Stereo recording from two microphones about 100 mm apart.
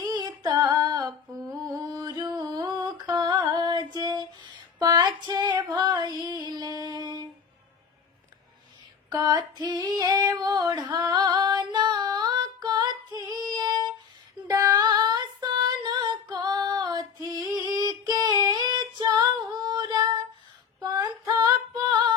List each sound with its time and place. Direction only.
0.0 s female singing: 45° right (ahead or behind)
1.5 s music: 35° right (ahead or behind)
2.4 s a sound: 45° right (ahead or behind)
9.0 s female singing: 40° right (ahead or behind)